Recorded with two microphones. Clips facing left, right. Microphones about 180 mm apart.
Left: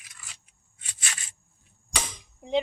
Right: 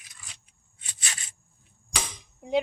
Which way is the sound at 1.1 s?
25° right (ahead or behind).